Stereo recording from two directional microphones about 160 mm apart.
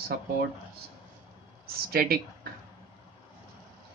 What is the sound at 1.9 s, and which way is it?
Speech, 70° right (ahead or behind).